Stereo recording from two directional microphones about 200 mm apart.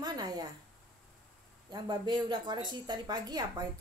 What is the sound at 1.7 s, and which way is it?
Speech, 25° right (ahead or behind).